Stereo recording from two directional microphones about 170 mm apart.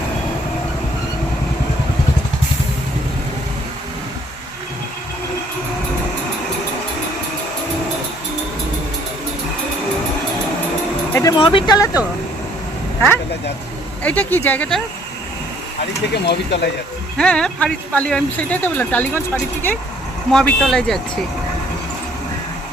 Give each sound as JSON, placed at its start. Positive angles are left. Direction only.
{"t": 11.1, "sound": "speech", "side_deg": 20}
{"t": 14.0, "sound": "speech", "side_deg": 10}
{"t": 16.1, "sound": "speech", "side_deg": 80}
{"t": 17.2, "sound": "speech", "side_deg": 5}
{"t": 20.3, "sound": "speech", "side_deg": 5}